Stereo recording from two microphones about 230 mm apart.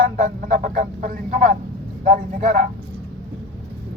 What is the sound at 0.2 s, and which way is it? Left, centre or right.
A man's voice, right.